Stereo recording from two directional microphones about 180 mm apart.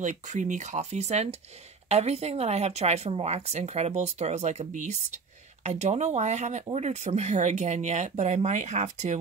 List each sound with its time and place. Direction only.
0.0 s speech: 45° right (ahead or behind)